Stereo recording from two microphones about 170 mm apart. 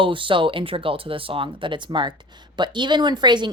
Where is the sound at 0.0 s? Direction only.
30° right (ahead or behind).